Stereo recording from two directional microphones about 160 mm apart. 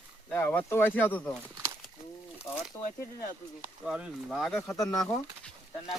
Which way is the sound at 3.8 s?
5° right (ahead or behind).